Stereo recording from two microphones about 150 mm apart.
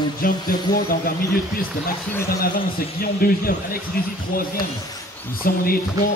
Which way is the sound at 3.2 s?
80° left.